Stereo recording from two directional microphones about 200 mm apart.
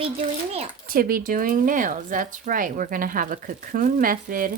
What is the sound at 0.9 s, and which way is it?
Speech, 45° right (ahead or behind).